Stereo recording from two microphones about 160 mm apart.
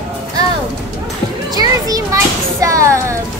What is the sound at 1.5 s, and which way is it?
A child's voice, 20° right (ahead or behind).